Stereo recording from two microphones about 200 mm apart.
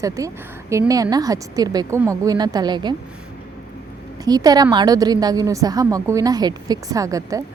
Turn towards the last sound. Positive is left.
turn(degrees=-15)  # may be behind; listen again after turning